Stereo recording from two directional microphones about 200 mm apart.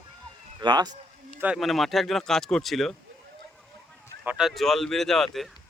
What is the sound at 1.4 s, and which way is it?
Speech, 5° right (ahead or behind).